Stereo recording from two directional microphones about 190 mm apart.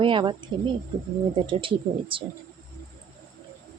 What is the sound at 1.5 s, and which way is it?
Speech, 25° right (ahead or behind).